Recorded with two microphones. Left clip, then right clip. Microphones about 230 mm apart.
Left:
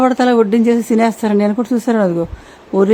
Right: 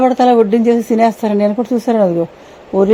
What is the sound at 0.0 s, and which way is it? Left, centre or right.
A woman's voice, centre.